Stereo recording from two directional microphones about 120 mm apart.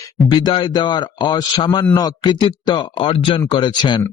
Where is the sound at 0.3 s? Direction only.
40° left (ahead or behind).